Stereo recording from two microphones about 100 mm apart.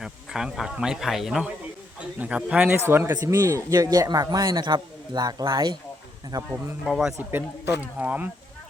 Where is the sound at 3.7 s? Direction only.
40° right (ahead or behind).